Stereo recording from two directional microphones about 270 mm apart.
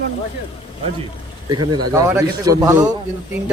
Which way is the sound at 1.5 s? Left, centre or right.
Centre.